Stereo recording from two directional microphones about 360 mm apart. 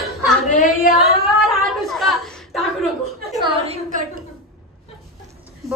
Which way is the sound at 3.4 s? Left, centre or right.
Centre.